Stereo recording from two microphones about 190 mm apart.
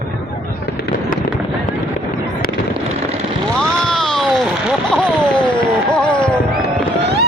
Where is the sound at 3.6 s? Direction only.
5° left (ahead or behind).